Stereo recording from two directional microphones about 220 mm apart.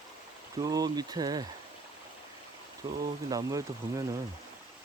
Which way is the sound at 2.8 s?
25° right (ahead or behind).